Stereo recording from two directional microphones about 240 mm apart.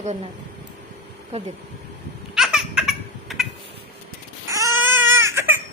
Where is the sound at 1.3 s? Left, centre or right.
Right.